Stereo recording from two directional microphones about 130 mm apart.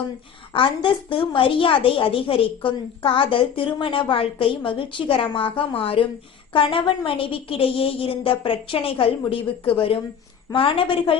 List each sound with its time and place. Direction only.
0.5 s a woman's voice: 40° left (ahead or behind)